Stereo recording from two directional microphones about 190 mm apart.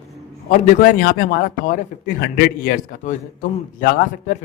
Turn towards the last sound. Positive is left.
turn(degrees=45)  # may be behind; listen again after turning